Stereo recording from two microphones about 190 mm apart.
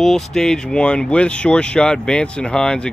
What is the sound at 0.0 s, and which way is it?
Speech, centre (ahead or behind).